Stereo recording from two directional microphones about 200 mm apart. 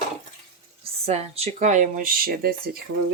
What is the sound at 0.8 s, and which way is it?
Speech, 30° right (ahead or behind).